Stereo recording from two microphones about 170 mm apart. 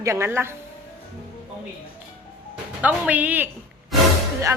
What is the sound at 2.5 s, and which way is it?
Speech, 10° right (ahead or behind).